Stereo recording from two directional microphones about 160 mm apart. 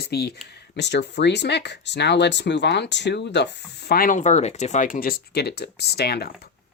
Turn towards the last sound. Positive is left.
turn(degrees=85)